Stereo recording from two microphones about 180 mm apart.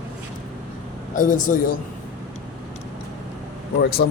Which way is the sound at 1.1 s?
45° left (ahead or behind).